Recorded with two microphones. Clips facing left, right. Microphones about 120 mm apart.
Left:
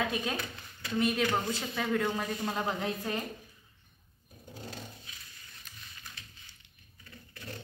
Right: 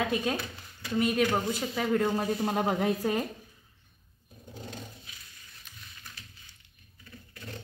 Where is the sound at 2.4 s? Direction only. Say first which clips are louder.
Right 5 dB; 55° right (ahead or behind).